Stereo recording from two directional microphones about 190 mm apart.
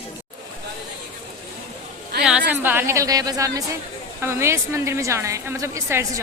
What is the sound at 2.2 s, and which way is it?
A woman's voice, 5° right (ahead or behind).